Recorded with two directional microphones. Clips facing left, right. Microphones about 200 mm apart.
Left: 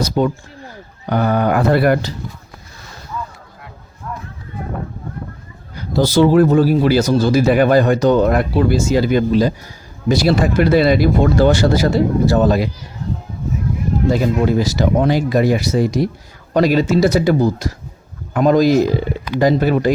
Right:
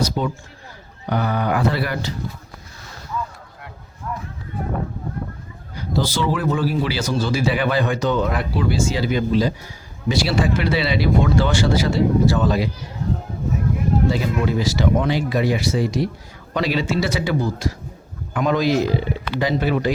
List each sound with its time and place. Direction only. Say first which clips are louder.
0.2 s speech: left 7 dB; 55° left (ahead or behind)
6.0 s speech: left 10 dB; 45° left (ahead or behind)
14.1 s speech: left 6 dB; 45° left (ahead or behind)